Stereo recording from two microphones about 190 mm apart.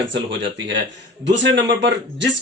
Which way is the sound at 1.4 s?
65° right (ahead or behind).